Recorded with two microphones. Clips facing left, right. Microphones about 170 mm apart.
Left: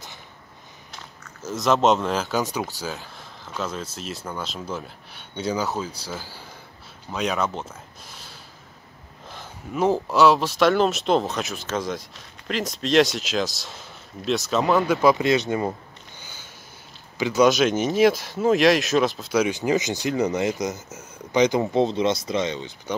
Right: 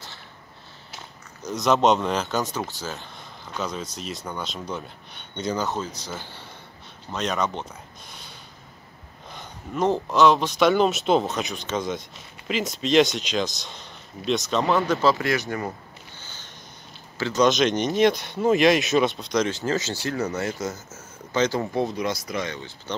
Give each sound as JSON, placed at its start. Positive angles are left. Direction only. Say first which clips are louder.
{"t": 1.4, "sound": "speech", "louder": "even", "side_deg": 0}
{"t": 8.1, "sound": "snort", "louder": "even", "side_deg": 0}
{"t": 9.3, "sound": "speech", "louder": "left 1 dB", "side_deg": 5}
{"t": 15.0, "sound": "speech", "louder": "left 3 dB", "side_deg": 15}
{"t": 16.2, "sound": "a sound", "louder": "left 1 dB", "side_deg": 10}
{"t": 17.2, "sound": "speech", "louder": "left 2 dB", "side_deg": 10}